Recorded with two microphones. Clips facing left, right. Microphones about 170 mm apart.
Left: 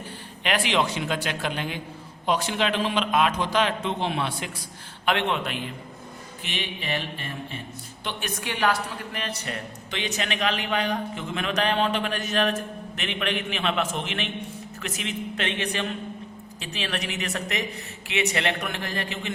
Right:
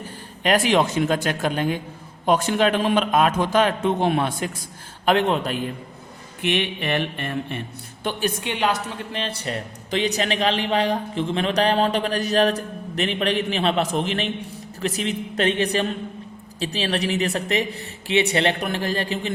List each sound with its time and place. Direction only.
0.4 s a man's voice: 45° right (ahead or behind)
6.4 s a sound: 60° right (ahead or behind)
8.2 s a woman's voice: 25° right (ahead or behind)